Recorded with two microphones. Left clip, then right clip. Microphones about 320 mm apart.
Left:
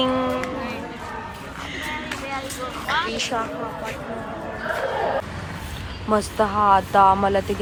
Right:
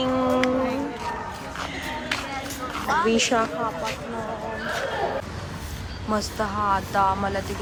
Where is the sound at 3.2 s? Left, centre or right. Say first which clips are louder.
Right 3 dB; right.